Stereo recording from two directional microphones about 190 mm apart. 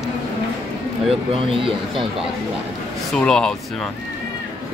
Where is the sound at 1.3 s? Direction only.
30° right (ahead or behind).